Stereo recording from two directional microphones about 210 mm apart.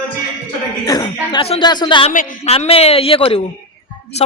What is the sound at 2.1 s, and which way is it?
Speech, 40° left (ahead or behind).